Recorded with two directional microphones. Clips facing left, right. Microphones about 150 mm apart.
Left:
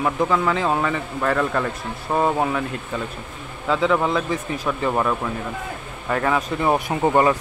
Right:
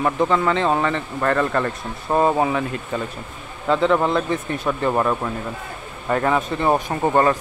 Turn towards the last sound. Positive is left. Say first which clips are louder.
# even
turn(degrees=5)  # may be behind; listen again after turning